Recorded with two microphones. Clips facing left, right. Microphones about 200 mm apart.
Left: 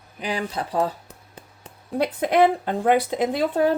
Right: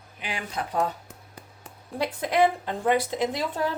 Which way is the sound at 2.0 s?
60° left (ahead or behind).